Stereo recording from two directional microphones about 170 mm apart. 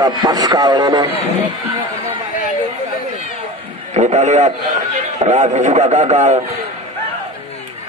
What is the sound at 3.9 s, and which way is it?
A man's voice, 40° right (ahead or behind).